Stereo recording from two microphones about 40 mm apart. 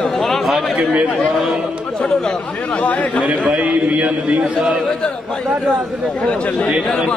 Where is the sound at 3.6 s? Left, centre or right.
Right.